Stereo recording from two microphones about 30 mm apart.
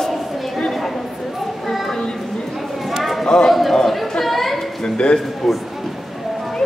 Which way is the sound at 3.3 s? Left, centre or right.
Centre.